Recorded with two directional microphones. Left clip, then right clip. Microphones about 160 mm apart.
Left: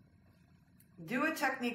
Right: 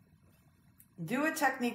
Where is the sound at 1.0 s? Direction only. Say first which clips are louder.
Right 3 dB; 25° right (ahead or behind).